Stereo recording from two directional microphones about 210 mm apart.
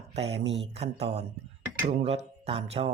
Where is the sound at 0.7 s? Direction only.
30° right (ahead or behind).